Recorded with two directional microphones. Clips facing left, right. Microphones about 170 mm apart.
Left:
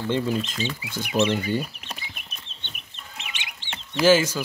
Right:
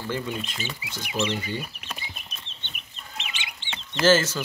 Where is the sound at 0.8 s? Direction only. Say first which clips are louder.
Left 5 dB; 55° left (ahead or behind).